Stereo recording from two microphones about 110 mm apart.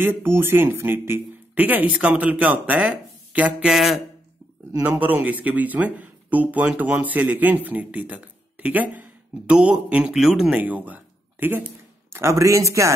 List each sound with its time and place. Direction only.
0.0 s speech: 20° right (ahead or behind); by 4.0 s 5° right (ahead or behind)
4.8 s speech: 15° right (ahead or behind)